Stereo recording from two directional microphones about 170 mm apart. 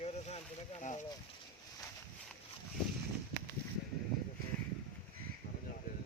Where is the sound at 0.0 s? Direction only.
35° left (ahead or behind).